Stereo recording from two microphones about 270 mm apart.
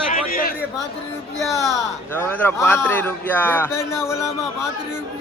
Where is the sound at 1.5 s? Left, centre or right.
Centre.